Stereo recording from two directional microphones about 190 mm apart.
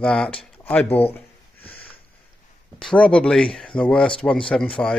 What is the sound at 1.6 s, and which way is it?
Sniff, 30° left (ahead or behind).